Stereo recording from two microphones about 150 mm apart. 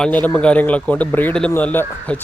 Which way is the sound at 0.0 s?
10° left (ahead or behind).